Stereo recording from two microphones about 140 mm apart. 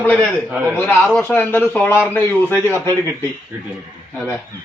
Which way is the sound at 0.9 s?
5° left (ahead or behind).